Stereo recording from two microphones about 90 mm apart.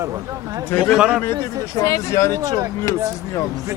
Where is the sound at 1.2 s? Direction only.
30° left (ahead or behind).